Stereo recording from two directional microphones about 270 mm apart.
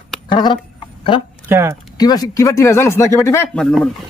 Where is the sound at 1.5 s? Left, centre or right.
Centre.